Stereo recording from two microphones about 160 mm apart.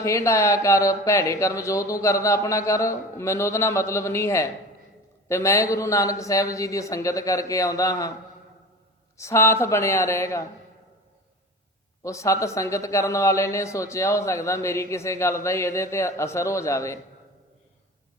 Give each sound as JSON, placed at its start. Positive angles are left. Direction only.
{"t": 0.0, "sound": "speech", "side_deg": 20}
{"t": 9.1, "sound": "speech", "side_deg": 15}
{"t": 12.0, "sound": "speech", "side_deg": 20}